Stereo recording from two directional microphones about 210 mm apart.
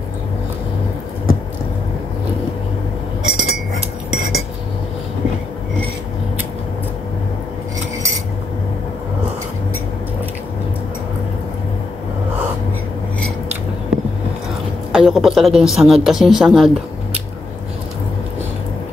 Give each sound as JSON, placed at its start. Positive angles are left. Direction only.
{"t": 3.3, "sound": "glass", "side_deg": -70}
{"t": 4.1, "sound": "cutlery", "side_deg": -70}
{"t": 14.9, "sound": "a woman's voice", "side_deg": 0}